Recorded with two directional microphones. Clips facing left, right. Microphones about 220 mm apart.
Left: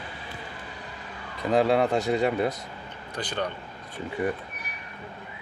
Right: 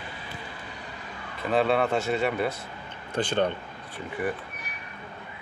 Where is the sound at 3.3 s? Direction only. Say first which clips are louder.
Right 5 dB; 25° right (ahead or behind).